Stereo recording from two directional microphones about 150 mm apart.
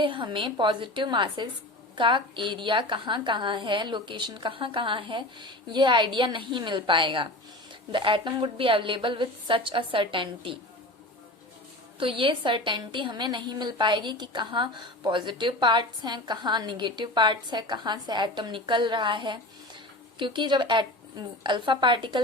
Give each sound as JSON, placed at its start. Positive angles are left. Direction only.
{"t": 0.0, "sound": "a woman's voice", "side_deg": -35}
{"t": 11.9, "sound": "a woman's voice", "side_deg": -35}